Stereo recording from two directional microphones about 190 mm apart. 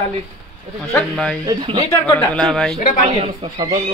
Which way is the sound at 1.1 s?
5° left (ahead or behind).